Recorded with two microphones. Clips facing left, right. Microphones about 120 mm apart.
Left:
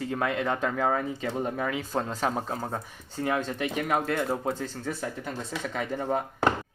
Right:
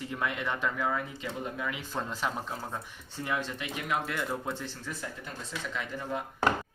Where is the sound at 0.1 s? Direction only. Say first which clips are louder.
Left 5 dB; 35° left (ahead or behind).